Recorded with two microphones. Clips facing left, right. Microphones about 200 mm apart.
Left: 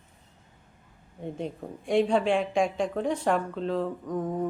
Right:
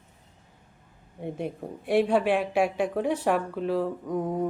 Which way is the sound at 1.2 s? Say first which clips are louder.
Right 2 dB; 10° right (ahead or behind).